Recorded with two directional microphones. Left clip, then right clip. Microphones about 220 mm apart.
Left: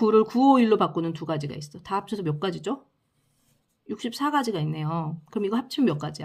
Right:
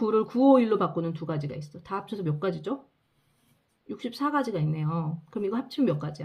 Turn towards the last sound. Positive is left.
turn(degrees=35)  # may be behind; listen again after turning